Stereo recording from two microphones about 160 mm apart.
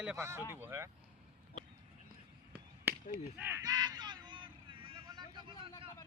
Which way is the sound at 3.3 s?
10° right (ahead or behind).